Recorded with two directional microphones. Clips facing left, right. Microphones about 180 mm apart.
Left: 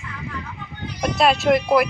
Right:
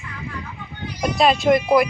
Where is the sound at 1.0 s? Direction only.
Centre (ahead or behind).